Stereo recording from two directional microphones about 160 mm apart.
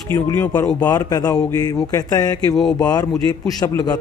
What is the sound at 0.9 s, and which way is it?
Speech, 25° left (ahead or behind).